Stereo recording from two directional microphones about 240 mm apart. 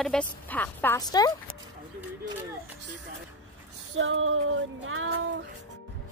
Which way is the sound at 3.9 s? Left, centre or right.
Right.